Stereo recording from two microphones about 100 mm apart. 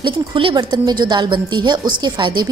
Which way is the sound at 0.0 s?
55° right (ahead or behind).